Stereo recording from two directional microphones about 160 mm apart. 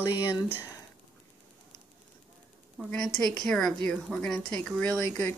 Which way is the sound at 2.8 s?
Centre (ahead or behind).